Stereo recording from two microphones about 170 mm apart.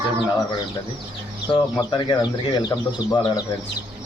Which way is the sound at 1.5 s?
25° left (ahead or behind).